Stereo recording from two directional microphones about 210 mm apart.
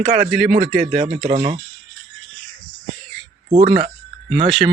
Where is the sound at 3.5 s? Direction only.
35° right (ahead or behind).